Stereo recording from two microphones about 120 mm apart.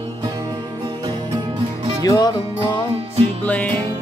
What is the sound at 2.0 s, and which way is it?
Music, 30° left (ahead or behind).